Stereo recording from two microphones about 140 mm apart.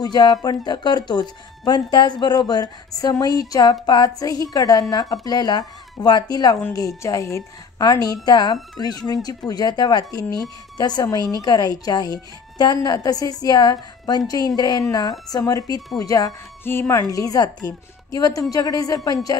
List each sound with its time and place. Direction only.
0.0 s speech: 30° left (ahead or behind)
3.8 s a sound: 30° left (ahead or behind)
4.2 s speech: 25° left (ahead or behind)